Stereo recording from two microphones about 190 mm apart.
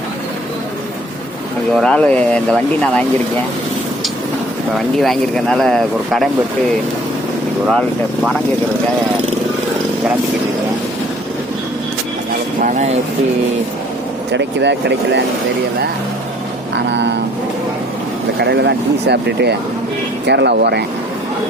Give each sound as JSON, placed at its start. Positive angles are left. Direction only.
{"t": 1.7, "sound": "speech", "side_deg": 5}
{"t": 4.9, "sound": "speech", "side_deg": 0}
{"t": 7.7, "sound": "speech", "side_deg": 0}
{"t": 12.6, "sound": "speech", "side_deg": -40}
{"t": 14.3, "sound": "speech", "side_deg": -65}
{"t": 16.7, "sound": "vehicle", "side_deg": -65}
{"t": 18.3, "sound": "speech", "side_deg": -60}